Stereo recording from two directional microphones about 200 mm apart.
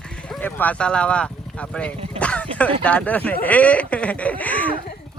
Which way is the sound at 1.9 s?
30° right (ahead or behind).